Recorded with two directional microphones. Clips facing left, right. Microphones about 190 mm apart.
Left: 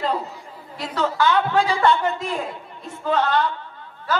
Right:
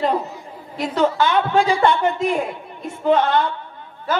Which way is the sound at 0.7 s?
25° right (ahead or behind).